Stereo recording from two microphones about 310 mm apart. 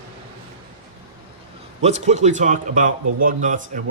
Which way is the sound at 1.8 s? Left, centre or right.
Right.